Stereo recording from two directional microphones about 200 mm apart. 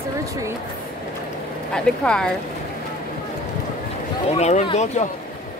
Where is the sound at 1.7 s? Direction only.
5° left (ahead or behind).